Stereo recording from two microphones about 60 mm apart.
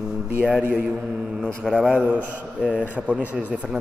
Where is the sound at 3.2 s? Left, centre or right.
Right.